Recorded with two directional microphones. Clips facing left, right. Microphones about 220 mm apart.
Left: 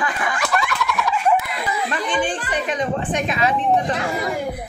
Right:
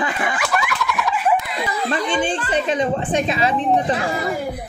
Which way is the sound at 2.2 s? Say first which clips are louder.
Right 2 dB; 25° right (ahead or behind).